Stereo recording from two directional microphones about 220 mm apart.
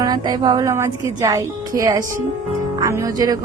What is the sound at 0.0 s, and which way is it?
A woman's voice, 20° right (ahead or behind).